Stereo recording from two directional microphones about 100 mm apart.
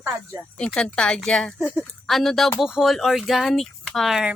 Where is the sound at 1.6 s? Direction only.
5° right (ahead or behind).